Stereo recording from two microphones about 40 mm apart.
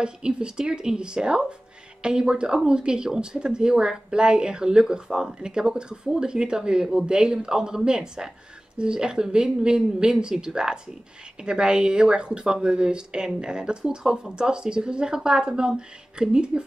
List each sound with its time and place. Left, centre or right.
0.0 s speech: right